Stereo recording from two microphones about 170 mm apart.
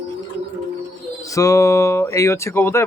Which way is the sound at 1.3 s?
20° left (ahead or behind).